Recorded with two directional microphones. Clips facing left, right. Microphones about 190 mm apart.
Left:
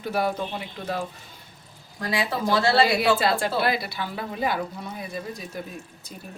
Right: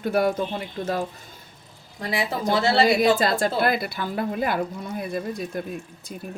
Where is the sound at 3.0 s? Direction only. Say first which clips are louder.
Right 2 dB; 45° right (ahead or behind).